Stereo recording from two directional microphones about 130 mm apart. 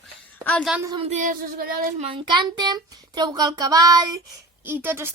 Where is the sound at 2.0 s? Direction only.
45° right (ahead or behind).